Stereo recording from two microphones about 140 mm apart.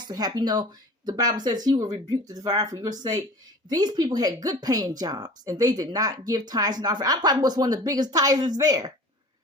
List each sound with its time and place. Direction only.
0.1 s speech: 30° right (ahead or behind)